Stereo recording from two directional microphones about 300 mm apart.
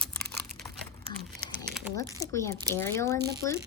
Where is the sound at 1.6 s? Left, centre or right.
Centre.